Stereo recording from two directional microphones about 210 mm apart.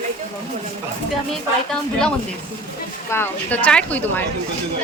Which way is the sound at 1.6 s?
5° left (ahead or behind).